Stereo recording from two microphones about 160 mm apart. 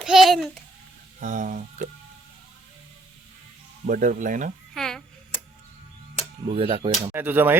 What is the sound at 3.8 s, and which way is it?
Speech, 60° right (ahead or behind).